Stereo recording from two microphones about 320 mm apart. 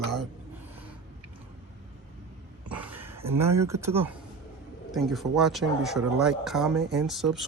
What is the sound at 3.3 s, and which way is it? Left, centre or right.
Speech, centre.